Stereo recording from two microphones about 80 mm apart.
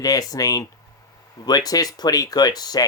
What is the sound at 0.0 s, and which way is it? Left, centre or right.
Speech, left.